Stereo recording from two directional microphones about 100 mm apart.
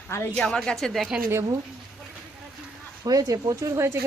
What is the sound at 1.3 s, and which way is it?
Speech, 30° right (ahead or behind).